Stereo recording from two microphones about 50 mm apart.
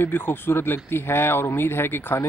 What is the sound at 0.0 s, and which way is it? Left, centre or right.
Speech, left.